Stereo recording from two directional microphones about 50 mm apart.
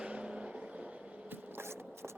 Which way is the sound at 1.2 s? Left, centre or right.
Right.